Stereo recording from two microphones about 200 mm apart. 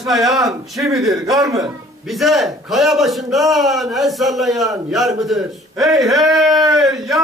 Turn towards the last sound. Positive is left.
turn(degrees=0)  # may be behind; listen again after turning